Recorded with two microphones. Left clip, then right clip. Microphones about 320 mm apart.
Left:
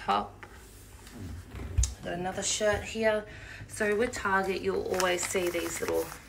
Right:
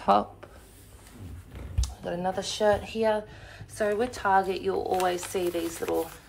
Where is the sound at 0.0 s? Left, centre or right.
Centre.